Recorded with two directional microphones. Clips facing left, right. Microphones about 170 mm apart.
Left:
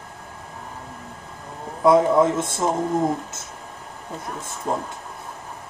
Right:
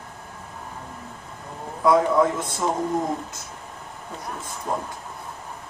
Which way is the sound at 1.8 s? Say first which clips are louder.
Left 3 dB; 25° left (ahead or behind).